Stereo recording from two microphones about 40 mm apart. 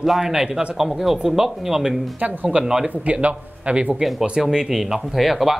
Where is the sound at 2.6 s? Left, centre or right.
Centre.